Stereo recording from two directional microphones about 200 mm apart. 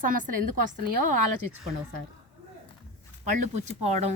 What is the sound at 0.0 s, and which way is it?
Speech, 45° right (ahead or behind).